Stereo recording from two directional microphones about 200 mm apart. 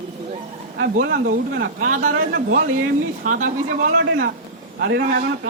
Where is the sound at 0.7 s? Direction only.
50° right (ahead or behind).